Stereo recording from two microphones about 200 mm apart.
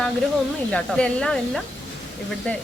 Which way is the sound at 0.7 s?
5° left (ahead or behind).